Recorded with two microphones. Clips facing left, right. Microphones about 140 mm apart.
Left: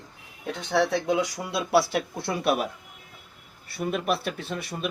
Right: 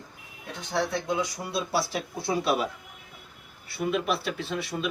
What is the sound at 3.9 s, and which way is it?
Speech, 50° left (ahead or behind).